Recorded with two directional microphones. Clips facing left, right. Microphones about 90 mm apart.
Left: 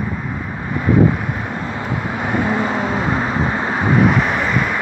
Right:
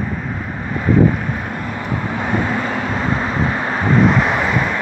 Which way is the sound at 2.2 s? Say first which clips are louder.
Left 2 dB; 20° left (ahead or behind).